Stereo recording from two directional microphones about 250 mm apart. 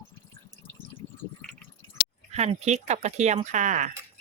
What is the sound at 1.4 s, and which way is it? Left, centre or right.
Drip, centre.